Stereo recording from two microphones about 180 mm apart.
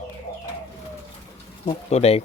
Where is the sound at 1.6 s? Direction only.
35° left (ahead or behind).